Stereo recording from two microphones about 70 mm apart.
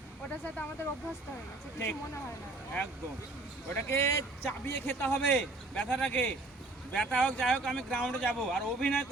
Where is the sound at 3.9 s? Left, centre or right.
Left.